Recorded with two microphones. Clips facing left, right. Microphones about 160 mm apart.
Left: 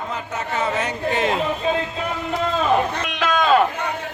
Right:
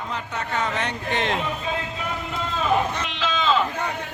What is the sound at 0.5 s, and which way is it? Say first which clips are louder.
Speech: left 3 dB; 5° left (ahead or behind).